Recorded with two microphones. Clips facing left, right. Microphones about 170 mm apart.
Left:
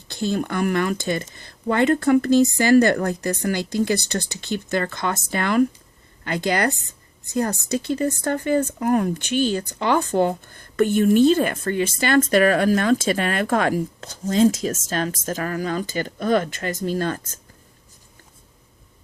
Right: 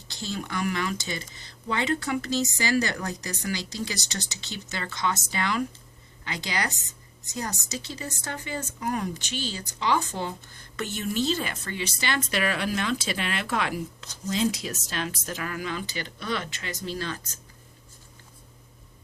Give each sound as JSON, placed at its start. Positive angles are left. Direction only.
{"t": 0.1, "sound": "a woman's voice", "side_deg": 55}